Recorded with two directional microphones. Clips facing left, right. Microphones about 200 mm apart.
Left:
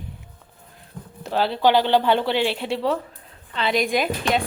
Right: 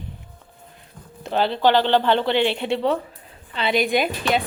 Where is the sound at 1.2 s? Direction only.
5° left (ahead or behind).